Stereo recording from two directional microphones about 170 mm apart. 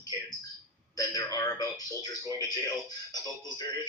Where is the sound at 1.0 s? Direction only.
20° left (ahead or behind).